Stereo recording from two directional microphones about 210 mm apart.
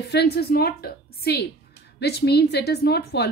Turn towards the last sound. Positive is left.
turn(degrees=50)  # may be behind; listen again after turning